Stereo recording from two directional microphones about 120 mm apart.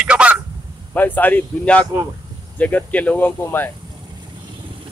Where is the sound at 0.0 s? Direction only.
10° right (ahead or behind).